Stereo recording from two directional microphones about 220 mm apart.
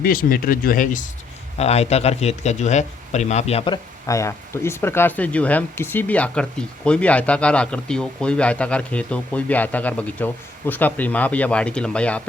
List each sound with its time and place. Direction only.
0.0 s a man's voice: 40° left (ahead or behind); by 12.3 s 5° left (ahead or behind)